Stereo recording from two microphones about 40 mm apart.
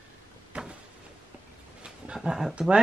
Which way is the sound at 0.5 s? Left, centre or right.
Right.